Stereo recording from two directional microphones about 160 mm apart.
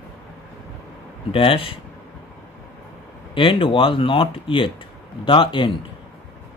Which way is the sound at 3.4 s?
30° left (ahead or behind).